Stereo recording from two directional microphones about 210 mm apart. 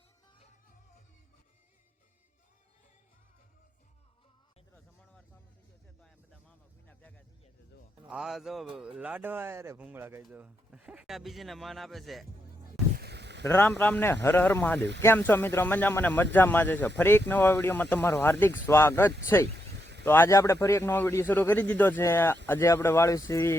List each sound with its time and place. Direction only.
6.8 s a sound: 5° left (ahead or behind)
8.1 s speech: centre (ahead or behind)
13.0 s a sound: 50° right (ahead or behind)
13.5 s a man's voice: 10° left (ahead or behind)
19.5 s vehicle: 55° right (ahead or behind)
20.1 s a man's voice: 10° left (ahead or behind)